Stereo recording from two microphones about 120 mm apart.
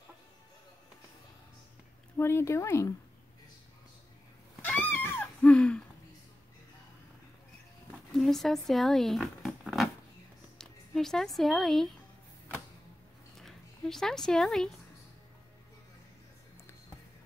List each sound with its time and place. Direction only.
2.1 s speech: 20° left (ahead or behind)
4.6 s a sound: 15° left (ahead or behind)
8.1 s zipper: centre (ahead or behind)
10.6 s speech: 5° left (ahead or behind)
13.4 s speech: 5° left (ahead or behind)